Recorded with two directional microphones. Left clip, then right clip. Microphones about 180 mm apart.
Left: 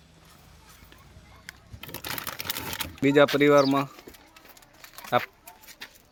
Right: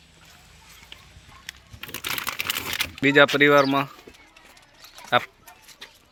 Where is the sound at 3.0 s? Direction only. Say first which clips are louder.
Right 3 dB; 5° left (ahead or behind).